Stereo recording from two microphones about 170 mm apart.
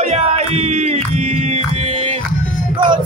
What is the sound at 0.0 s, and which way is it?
Music, 40° right (ahead or behind).